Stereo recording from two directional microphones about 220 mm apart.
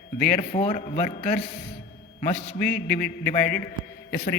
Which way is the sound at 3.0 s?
40° left (ahead or behind).